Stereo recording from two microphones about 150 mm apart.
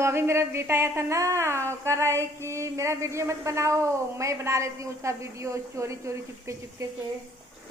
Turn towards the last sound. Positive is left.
turn(degrees=-20)  # may be behind; listen again after turning